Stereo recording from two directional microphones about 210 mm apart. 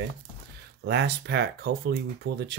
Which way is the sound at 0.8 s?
55° right (ahead or behind).